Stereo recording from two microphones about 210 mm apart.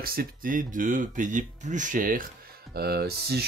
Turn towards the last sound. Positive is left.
turn(degrees=-50)  # may be behind; listen again after turning